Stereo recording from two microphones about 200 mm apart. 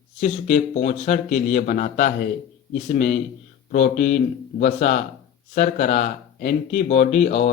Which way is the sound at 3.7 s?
40° left (ahead or behind).